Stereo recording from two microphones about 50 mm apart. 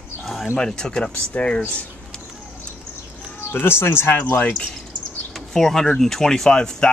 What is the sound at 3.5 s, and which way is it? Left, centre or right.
Speech, left.